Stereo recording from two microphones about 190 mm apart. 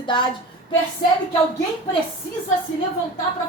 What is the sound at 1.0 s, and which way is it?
Speech, 55° left (ahead or behind).